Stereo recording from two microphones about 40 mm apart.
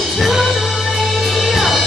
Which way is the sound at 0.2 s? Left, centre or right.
Centre.